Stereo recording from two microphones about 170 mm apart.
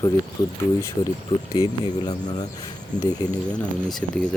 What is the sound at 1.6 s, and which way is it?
Speech, 20° left (ahead or behind).